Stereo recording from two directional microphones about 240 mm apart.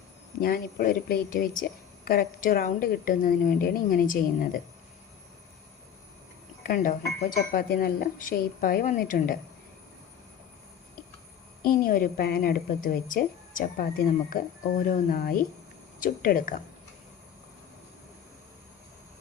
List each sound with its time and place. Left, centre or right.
0.4 s a woman's voice: left
6.6 s a woman's voice: left
11.6 s a woman's voice: left